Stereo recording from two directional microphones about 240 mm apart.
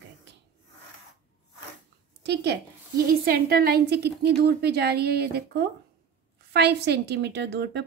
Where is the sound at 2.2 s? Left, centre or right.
Right.